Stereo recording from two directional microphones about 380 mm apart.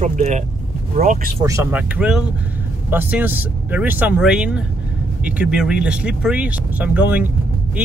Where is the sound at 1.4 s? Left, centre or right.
Centre.